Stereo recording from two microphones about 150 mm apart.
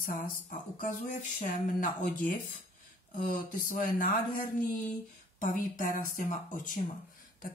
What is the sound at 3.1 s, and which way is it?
Speech, 60° left (ahead or behind).